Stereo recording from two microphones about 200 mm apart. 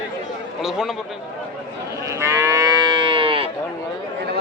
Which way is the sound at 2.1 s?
15° right (ahead or behind).